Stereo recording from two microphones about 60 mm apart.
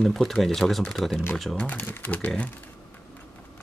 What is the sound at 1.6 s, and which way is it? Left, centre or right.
Speech, left.